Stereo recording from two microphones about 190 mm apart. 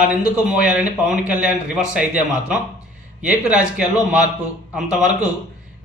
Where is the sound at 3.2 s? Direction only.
5° right (ahead or behind).